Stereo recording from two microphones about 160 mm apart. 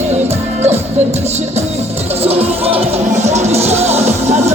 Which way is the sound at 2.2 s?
40° right (ahead or behind).